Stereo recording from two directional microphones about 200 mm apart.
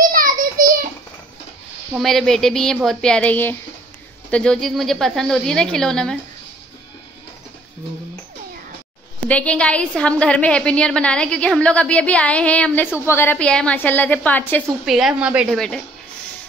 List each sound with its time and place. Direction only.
0.1 s a sound: 45° right (ahead or behind)
2.0 s a woman's voice: centre (ahead or behind)
9.3 s a woman's voice: 5° left (ahead or behind)
14.9 s a woman's voice: centre (ahead or behind)